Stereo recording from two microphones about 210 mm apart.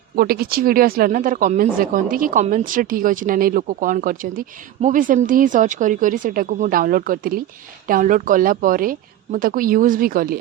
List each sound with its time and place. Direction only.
0.2 s speech: 45° right (ahead or behind)